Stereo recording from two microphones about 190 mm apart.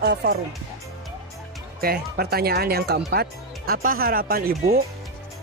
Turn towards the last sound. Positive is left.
turn(degrees=-50)  # may be behind; listen again after turning